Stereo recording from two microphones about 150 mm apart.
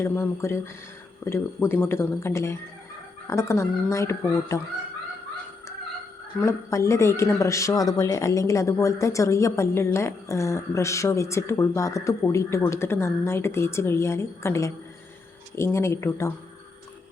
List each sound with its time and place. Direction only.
0.0 s speech: 15° left (ahead or behind)
6.4 s speech: 20° left (ahead or behind)